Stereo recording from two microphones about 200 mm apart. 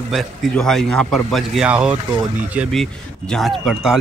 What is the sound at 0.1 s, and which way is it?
A man's voice, centre (ahead or behind).